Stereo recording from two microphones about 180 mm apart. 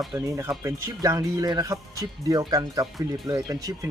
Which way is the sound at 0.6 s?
15° right (ahead or behind).